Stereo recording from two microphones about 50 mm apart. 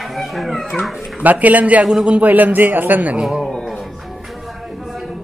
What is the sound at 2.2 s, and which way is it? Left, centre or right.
Speech, right.